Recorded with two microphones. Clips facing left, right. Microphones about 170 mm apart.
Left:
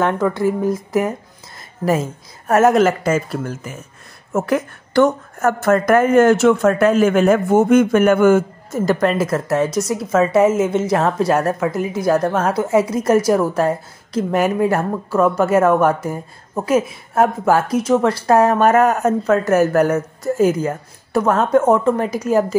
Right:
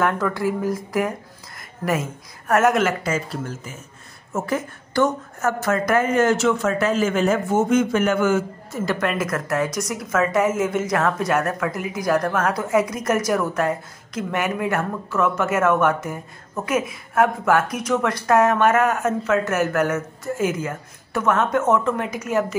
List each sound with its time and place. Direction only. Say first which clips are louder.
0.0 s a woman's voice: left 4 dB; 20° left (ahead or behind); by 3.2 s 45° left (ahead or behind)
4.3 s a woman's voice: left 6 dB; 65° left (ahead or behind); by 22.6 s 35° left (ahead or behind)